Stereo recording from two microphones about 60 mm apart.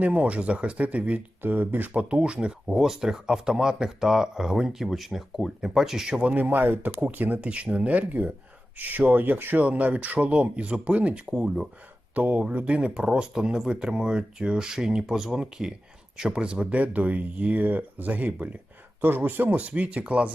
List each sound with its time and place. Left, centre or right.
0.0 s speech: right
2.6 s speech: centre
6.3 s speech: right; by 11.7 s centre
12.1 s speech: right